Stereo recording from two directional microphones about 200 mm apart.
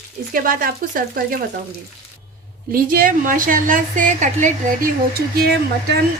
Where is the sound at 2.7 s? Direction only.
45° right (ahead or behind).